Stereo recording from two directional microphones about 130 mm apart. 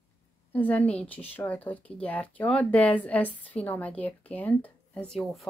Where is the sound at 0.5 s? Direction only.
10° left (ahead or behind).